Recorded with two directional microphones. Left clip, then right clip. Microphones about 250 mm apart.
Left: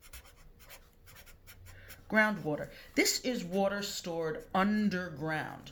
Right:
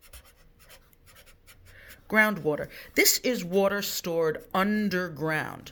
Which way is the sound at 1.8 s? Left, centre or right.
Right.